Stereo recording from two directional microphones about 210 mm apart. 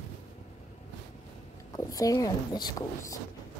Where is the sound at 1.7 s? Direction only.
15° left (ahead or behind).